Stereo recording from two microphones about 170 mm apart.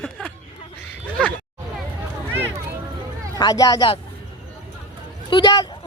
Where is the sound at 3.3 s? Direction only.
20° left (ahead or behind).